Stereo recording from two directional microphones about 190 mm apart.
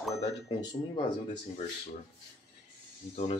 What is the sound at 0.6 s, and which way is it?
Speech, 25° left (ahead or behind).